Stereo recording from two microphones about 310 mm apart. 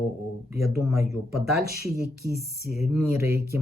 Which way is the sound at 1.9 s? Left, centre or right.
Right.